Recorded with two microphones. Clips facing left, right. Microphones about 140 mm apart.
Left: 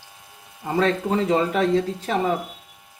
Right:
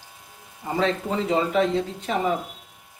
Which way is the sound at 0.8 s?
45° left (ahead or behind).